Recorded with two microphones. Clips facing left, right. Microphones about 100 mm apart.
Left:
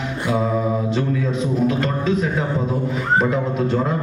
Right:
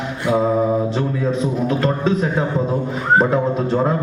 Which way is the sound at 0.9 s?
35° right (ahead or behind).